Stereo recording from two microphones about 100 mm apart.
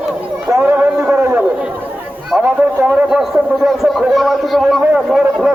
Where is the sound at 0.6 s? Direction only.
20° right (ahead or behind).